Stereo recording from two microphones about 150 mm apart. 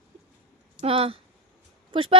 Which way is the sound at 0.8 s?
40° right (ahead or behind).